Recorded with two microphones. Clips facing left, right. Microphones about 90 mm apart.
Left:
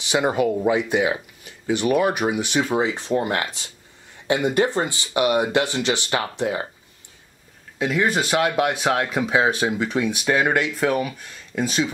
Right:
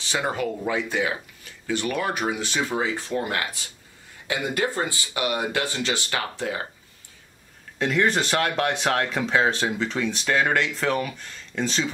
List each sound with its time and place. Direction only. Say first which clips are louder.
0.0 s speech: left 6 dB; 15° left (ahead or behind)
7.8 s speech: left 1 dB; 5° left (ahead or behind)